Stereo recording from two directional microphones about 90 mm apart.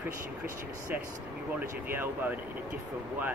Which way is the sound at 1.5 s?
20° right (ahead or behind).